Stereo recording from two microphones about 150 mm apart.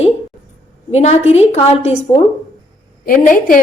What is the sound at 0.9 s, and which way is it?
A woman's voice, 45° left (ahead or behind).